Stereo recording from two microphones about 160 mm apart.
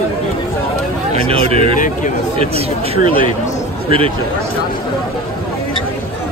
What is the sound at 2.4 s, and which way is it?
Speech, 40° right (ahead or behind).